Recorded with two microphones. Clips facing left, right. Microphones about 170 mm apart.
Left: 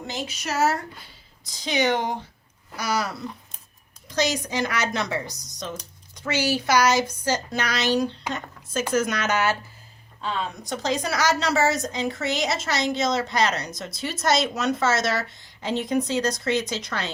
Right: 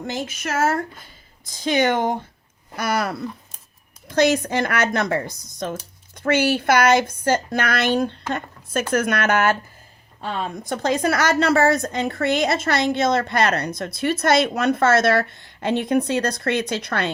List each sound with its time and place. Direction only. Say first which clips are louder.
0.1 s a woman's voice: right 3 dB; 50° right (ahead or behind)